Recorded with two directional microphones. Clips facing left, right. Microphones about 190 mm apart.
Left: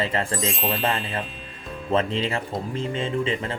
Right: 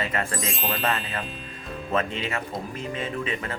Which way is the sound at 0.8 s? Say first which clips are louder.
Left 2 dB; 30° left (ahead or behind).